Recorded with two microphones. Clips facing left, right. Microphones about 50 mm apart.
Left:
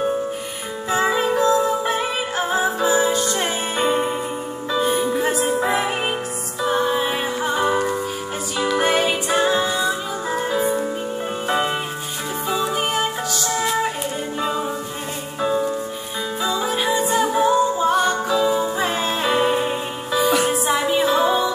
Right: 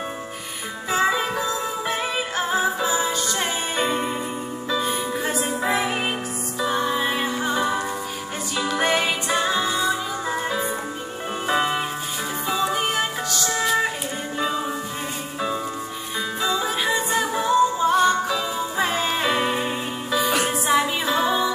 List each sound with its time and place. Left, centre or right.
0.8 s music: centre
9.3 s music: left
11.4 s music: centre
14.4 s music: centre
16.4 s music: centre